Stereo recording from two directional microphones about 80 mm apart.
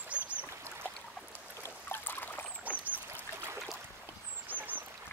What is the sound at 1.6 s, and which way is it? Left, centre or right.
Trickle, left.